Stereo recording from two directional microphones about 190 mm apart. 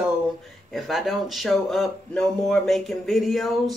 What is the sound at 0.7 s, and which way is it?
Speech, centre (ahead or behind).